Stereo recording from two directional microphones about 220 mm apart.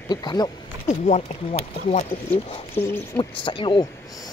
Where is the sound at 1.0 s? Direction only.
30° left (ahead or behind).